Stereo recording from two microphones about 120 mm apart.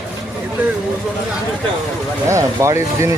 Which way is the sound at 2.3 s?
25° right (ahead or behind).